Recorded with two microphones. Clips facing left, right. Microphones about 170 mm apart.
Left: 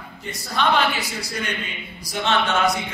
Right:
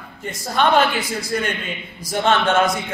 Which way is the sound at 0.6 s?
50° right (ahead or behind).